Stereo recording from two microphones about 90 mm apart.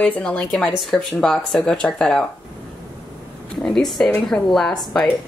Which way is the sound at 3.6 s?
5° left (ahead or behind).